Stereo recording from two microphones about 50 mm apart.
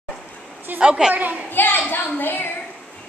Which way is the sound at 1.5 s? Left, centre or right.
Left.